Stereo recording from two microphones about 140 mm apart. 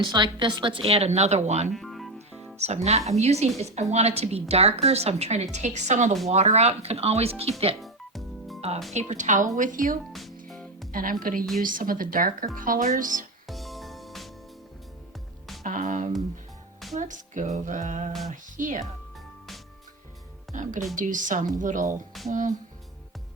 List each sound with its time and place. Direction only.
0.0 s a woman's voice: 35° right (ahead or behind); by 1.7 s 55° right (ahead or behind)
1.7 s music: centre (ahead or behind)
2.6 s a woman's voice: 50° right (ahead or behind)
7.8 s music: centre (ahead or behind)
8.9 s a sound: 55° right (ahead or behind)
9.6 s speech: 70° right (ahead or behind)
10.1 s speech: centre (ahead or behind)
10.5 s music: centre (ahead or behind)
10.9 s speech: 80° right
13.5 s music: centre (ahead or behind)
15.6 s a sound: 65° right (ahead or behind)
20.5 s a sound: 65° right (ahead or behind)
20.9 s speech: 70° right (ahead or behind)
22.3 s a sound: 65° right (ahead or behind)